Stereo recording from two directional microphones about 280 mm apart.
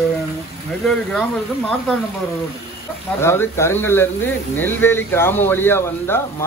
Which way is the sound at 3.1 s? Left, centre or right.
Centre.